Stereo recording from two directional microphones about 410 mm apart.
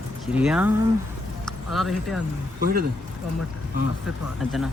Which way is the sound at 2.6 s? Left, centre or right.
Right.